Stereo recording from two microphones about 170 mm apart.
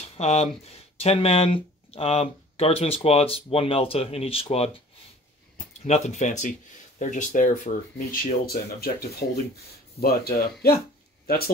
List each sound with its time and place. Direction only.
0.0 s a sound: 40° left (ahead or behind)
0.9 s speech: 35° left (ahead or behind)
5.9 s speech: 40° left (ahead or behind); by 11.5 s 60° left (ahead or behind)